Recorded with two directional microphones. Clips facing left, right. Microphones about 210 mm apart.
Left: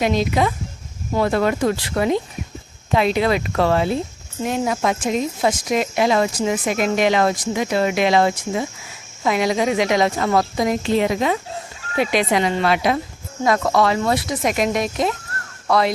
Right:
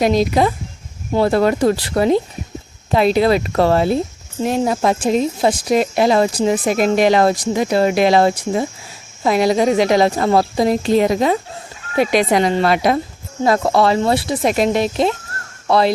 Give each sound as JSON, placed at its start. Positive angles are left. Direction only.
{"t": 0.0, "sound": "speech", "side_deg": -40}